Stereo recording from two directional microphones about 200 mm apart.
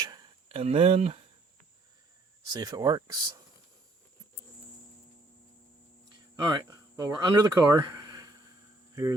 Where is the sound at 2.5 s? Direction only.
20° right (ahead or behind).